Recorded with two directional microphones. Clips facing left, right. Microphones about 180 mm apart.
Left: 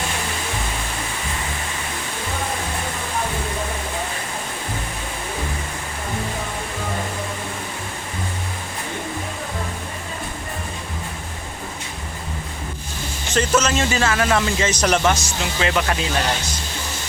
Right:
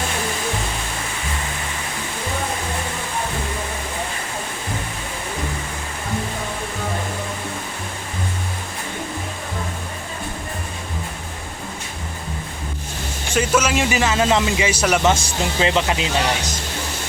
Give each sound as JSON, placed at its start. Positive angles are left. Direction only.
{"t": 13.3, "sound": "a man's voice", "side_deg": -10}
{"t": 15.0, "sound": "speech", "side_deg": -25}